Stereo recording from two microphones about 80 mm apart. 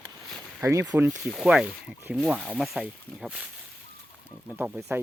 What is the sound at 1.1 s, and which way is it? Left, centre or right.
Speech, centre.